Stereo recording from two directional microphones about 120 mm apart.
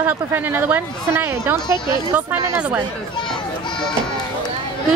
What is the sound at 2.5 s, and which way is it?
Speech, 15° right (ahead or behind).